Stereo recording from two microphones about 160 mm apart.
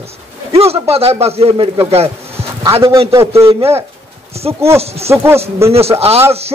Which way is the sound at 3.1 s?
20° right (ahead or behind).